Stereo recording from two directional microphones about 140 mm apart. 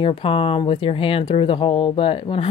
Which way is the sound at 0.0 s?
40° left (ahead or behind).